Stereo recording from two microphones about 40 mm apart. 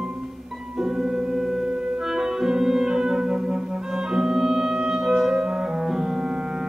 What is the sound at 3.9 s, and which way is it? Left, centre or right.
Clarinet, centre.